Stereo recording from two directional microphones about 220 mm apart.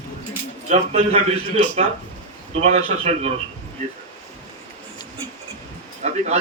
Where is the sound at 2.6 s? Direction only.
30° right (ahead or behind).